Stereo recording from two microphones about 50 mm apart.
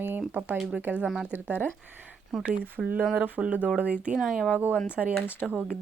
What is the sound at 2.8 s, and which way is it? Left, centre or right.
Speech, right.